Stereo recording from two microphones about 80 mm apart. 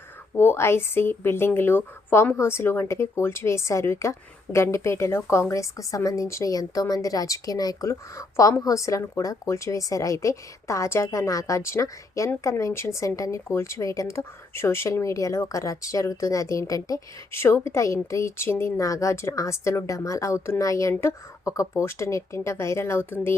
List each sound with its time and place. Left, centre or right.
0.3 s a woman's voice: left
17.3 s speech: left
18.8 s speech: left